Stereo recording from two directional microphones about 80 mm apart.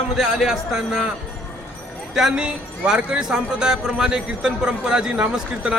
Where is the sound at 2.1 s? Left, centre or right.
Centre.